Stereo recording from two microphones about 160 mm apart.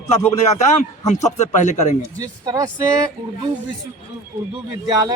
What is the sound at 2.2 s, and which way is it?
Speech, 25° right (ahead or behind).